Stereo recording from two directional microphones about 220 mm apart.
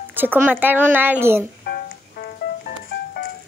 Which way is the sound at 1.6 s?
40° left (ahead or behind).